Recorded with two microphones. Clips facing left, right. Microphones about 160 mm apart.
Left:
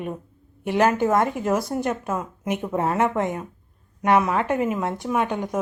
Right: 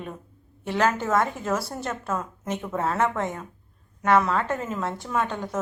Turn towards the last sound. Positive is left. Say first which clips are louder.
# left 4 dB
turn(degrees=15)  # may be behind; listen again after turning